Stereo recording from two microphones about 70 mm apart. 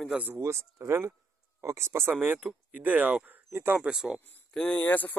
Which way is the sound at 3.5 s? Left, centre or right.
Right.